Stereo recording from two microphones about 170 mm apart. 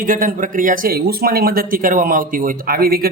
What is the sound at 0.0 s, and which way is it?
A man's voice, 55° right (ahead or behind).